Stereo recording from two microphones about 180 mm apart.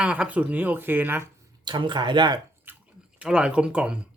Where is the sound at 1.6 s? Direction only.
25° right (ahead or behind).